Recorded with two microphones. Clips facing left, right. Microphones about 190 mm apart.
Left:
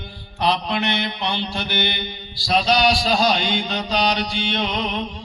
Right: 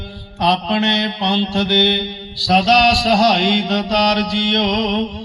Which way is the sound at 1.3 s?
65° right (ahead or behind).